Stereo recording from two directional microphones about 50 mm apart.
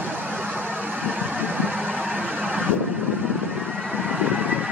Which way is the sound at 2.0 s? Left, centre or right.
Centre.